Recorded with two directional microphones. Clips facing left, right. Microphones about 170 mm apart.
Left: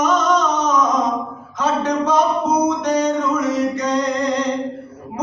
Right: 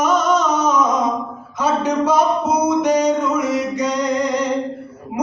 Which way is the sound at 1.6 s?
10° right (ahead or behind).